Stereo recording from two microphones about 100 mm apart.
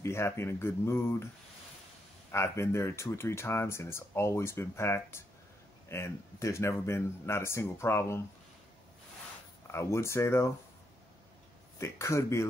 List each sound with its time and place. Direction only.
0.0 s speech: 25° left (ahead or behind)
2.3 s speech: 25° left (ahead or behind)
9.7 s speech: 25° left (ahead or behind)
11.8 s speech: 30° left (ahead or behind)